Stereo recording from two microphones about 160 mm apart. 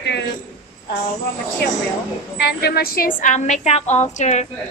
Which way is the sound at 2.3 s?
90° left.